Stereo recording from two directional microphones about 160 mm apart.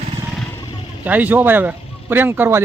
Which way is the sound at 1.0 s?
10° right (ahead or behind).